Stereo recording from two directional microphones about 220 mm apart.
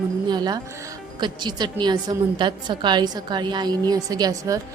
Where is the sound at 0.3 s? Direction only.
20° right (ahead or behind).